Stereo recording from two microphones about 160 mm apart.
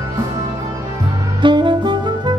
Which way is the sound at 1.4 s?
30° right (ahead or behind).